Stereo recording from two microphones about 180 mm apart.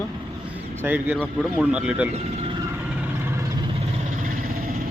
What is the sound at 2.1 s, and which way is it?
Speech, 35° right (ahead or behind).